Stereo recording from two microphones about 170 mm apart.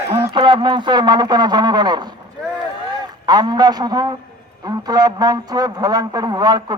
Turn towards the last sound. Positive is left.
turn(degrees=-25)  # may be behind; listen again after turning